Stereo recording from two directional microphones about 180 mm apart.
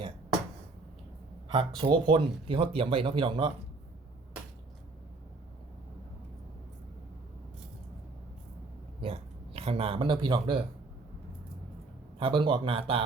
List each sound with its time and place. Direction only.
1.5 s speech: 25° right (ahead or behind)
9.0 s a sound: 30° right (ahead or behind)
12.2 s speech: 25° right (ahead or behind)